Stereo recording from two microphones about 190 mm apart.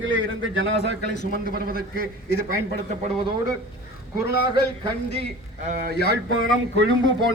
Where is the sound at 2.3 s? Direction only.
55° left (ahead or behind).